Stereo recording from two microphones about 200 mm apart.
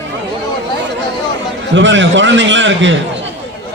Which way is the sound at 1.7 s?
65° right (ahead or behind).